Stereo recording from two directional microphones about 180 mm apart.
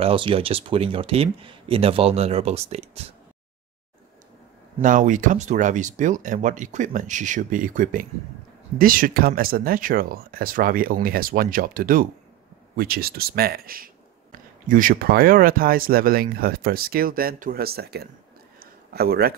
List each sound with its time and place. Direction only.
0.0 s speech: 30° right (ahead or behind)
4.8 s speech: 45° right (ahead or behind)
18.6 s a sound: 60° right (ahead or behind)